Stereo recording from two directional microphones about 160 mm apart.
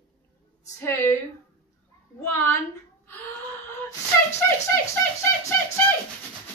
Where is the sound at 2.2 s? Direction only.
15° left (ahead or behind).